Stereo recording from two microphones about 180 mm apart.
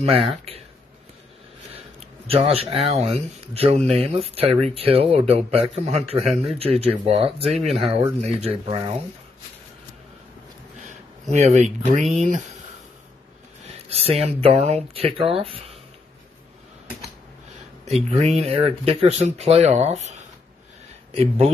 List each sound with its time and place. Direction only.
0.0 s speech: 30° right (ahead or behind)
2.2 s speech: 30° right (ahead or behind)
6.1 s speech: centre (ahead or behind)
6.6 s speech: 35° right (ahead or behind)
11.3 s speech: 40° right (ahead or behind)
13.9 s speech: 35° right (ahead or behind)
17.8 s speech: 35° right (ahead or behind)